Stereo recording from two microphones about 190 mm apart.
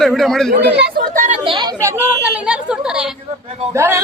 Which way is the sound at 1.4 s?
25° right (ahead or behind).